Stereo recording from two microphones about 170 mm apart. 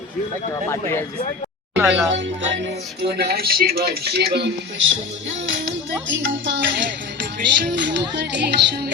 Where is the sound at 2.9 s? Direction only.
75° right (ahead or behind).